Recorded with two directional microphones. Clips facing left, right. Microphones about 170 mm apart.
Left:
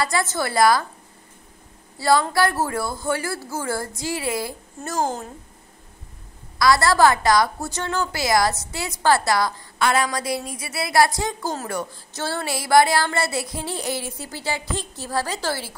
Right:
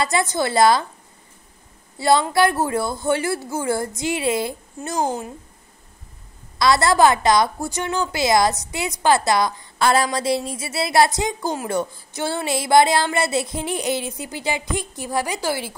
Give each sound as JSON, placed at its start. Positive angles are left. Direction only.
{"t": 0.0, "sound": "a woman's voice", "side_deg": -20}
{"t": 2.0, "sound": "a woman's voice", "side_deg": -20}
{"t": 4.9, "sound": "speech", "side_deg": 0}
{"t": 6.6, "sound": "a woman's voice", "side_deg": -20}
{"t": 9.8, "sound": "a woman's voice", "side_deg": -35}